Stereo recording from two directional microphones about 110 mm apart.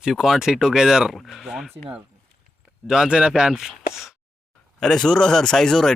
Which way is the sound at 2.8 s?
5° right (ahead or behind).